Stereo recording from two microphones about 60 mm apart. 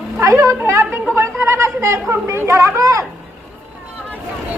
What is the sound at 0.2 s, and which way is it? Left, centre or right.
Speech, right.